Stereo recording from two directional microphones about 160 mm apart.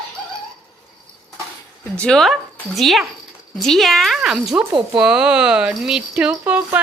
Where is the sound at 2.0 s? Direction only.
5° left (ahead or behind).